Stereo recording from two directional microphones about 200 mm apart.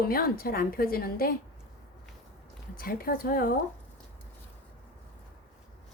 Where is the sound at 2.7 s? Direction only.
45° left (ahead or behind).